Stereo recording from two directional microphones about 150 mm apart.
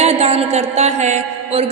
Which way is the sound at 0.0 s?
45° right (ahead or behind).